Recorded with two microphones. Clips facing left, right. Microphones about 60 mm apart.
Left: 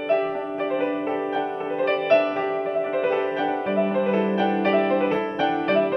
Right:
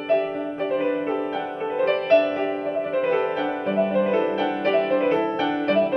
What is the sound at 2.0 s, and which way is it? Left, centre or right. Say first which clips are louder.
Music: right 1 dB; left.